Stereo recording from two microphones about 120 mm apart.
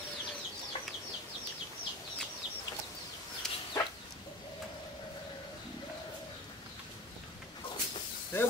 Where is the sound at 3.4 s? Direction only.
5° left (ahead or behind).